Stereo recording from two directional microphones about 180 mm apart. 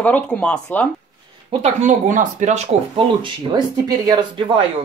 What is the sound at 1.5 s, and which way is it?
Speech, 35° right (ahead or behind).